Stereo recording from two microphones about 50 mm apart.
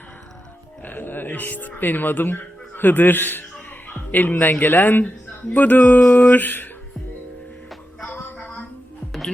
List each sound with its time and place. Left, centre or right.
0.8 s speech: left
4.8 s music: left